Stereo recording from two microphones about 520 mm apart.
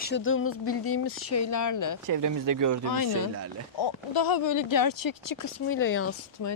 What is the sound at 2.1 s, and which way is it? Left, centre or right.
Speech, right.